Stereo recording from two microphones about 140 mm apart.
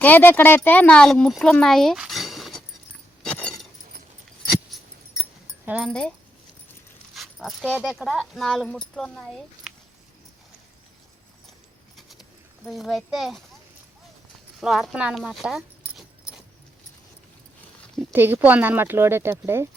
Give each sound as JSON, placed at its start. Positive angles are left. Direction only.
{"t": 0.0, "sound": "speech", "side_deg": 15}
{"t": 3.2, "sound": "keys jangling", "side_deg": 5}
{"t": 5.6, "sound": "speech", "side_deg": -10}
{"t": 5.9, "sound": "speech", "side_deg": 5}
{"t": 11.9, "sound": "pigeon", "side_deg": 0}
{"t": 12.6, "sound": "speech", "side_deg": 0}
{"t": 14.6, "sound": "speech", "side_deg": -5}
{"t": 18.1, "sound": "speech", "side_deg": -15}